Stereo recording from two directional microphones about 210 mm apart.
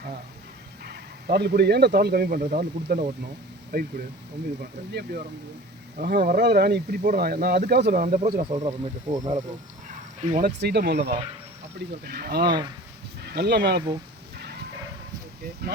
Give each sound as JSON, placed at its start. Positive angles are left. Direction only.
{"t": 0.9, "sound": "speech", "side_deg": -50}
{"t": 8.0, "sound": "speech", "side_deg": -35}
{"t": 9.1, "sound": "speech", "side_deg": -20}
{"t": 10.3, "sound": "speech", "side_deg": -45}